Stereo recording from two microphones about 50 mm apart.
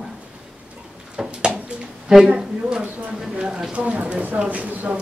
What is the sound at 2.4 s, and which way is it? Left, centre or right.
Speech, centre.